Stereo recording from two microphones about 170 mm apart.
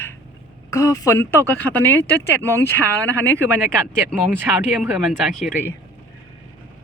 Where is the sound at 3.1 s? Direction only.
15° right (ahead or behind).